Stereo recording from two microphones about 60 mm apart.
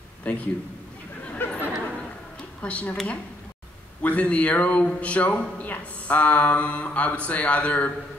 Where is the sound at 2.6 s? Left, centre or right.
Left.